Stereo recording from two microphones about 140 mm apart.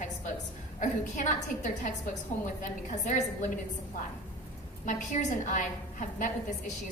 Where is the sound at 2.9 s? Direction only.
60° left (ahead or behind).